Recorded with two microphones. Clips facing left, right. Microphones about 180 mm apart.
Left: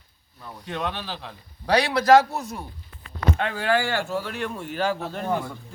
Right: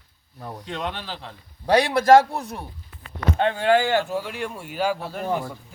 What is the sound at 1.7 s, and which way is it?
Speech, 50° right (ahead or behind).